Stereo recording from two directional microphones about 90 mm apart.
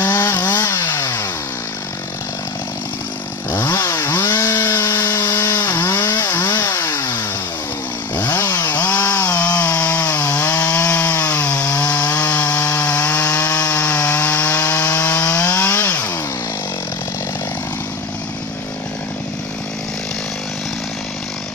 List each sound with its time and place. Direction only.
0.1 s chainsaw: 40° left (ahead or behind)
3.5 s chainsaw: 30° left (ahead or behind)
5.2 s wood: 35° left (ahead or behind)
5.7 s chainsaw: 25° left (ahead or behind)
6.6 s chainsaw: 40° left (ahead or behind)
6.9 s chainsaw: 30° left (ahead or behind)
8.3 s chainsaw: 35° left (ahead or behind)
8.6 s chainsaw: 15° left (ahead or behind)
10.6 s wood: 15° left (ahead or behind)
13.8 s rub: 15° left (ahead or behind)
15.2 s chainsaw: 15° left (ahead or behind)